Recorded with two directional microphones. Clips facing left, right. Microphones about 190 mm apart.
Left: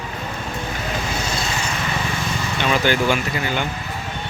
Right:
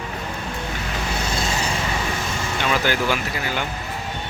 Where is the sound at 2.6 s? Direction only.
Centre (ahead or behind).